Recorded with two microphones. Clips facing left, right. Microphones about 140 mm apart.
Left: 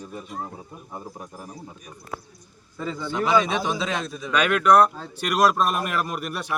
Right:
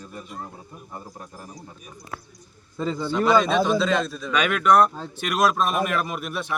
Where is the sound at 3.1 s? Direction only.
15° left (ahead or behind).